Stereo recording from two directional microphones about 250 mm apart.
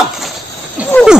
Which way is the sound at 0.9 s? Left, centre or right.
Centre.